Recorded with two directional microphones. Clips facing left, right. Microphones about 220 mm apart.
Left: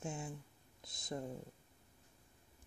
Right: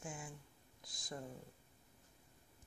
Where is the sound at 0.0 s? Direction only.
25° left (ahead or behind).